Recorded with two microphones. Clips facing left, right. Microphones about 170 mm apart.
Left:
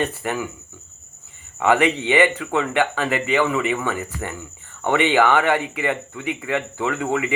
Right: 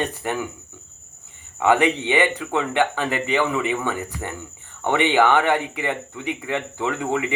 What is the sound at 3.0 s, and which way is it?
Speech, 15° left (ahead or behind).